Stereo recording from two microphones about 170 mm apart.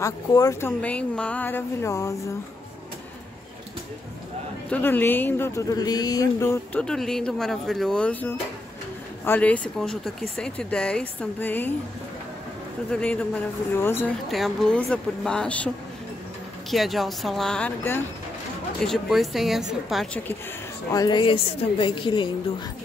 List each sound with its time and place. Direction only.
0.0 s speech: 20° left (ahead or behind)
4.6 s speech: 10° left (ahead or behind)
12.9 s speech: 5° left (ahead or behind)
14.3 s speech: centre (ahead or behind)
16.7 s speech: centre (ahead or behind)
20.9 s a woman's voice: 25° left (ahead or behind)